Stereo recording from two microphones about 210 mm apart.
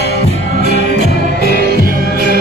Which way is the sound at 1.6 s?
45° right (ahead or behind).